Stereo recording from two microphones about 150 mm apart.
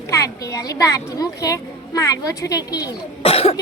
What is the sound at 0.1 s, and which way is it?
A woman's voice, 20° left (ahead or behind).